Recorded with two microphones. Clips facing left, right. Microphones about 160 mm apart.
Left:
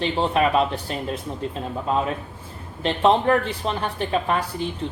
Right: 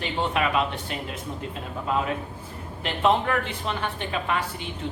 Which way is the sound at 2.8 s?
35° left (ahead or behind).